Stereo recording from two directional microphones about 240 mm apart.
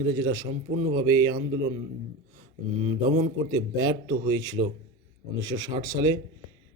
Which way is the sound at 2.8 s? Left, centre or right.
Centre.